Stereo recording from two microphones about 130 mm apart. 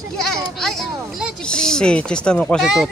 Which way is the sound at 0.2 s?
5° left (ahead or behind).